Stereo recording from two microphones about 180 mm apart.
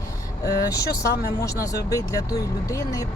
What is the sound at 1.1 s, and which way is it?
Speech, 65° left (ahead or behind).